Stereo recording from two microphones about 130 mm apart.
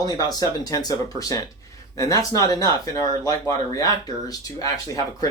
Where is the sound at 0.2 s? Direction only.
30° left (ahead or behind).